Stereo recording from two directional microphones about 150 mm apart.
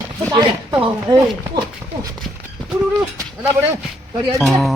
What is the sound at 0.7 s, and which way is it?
Speech, 10° right (ahead or behind).